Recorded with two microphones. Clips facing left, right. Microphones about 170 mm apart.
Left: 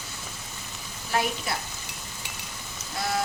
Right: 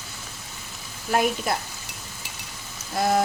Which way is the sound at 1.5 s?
50° right (ahead or behind).